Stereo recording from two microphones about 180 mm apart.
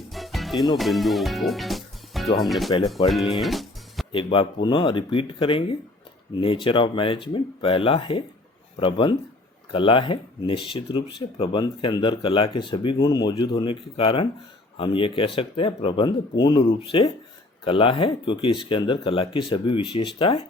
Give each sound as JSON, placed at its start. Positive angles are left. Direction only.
{"t": 0.1, "sound": "music", "side_deg": 0}
{"t": 0.8, "sound": "speech", "side_deg": 0}
{"t": 3.4, "sound": "music", "side_deg": 0}
{"t": 4.1, "sound": "speech", "side_deg": 30}